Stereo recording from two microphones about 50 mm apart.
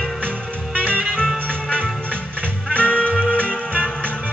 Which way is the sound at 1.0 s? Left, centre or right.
Centre.